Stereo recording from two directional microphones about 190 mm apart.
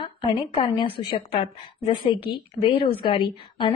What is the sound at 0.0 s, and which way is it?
A woman's voice, 30° left (ahead or behind).